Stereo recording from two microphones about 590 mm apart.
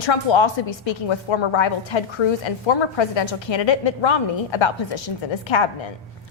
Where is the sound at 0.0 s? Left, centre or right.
Left.